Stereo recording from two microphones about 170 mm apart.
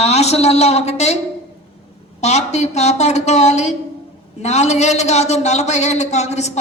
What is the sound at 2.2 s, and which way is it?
Speech, 40° left (ahead or behind).